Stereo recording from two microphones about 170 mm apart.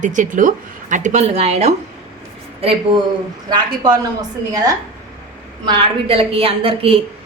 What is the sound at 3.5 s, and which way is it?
A woman's voice, 25° right (ahead or behind).